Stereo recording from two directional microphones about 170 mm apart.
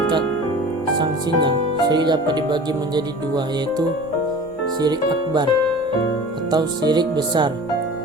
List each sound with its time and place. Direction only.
0.9 s speech: 25° right (ahead or behind)
6.5 s speech: 25° right (ahead or behind)